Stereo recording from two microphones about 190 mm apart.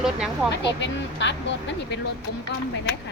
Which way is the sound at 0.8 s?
70° left (ahead or behind).